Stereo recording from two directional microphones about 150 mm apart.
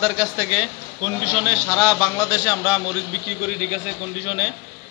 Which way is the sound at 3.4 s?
5° right (ahead or behind).